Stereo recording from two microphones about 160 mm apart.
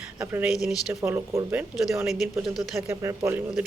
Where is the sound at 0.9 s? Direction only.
15° right (ahead or behind).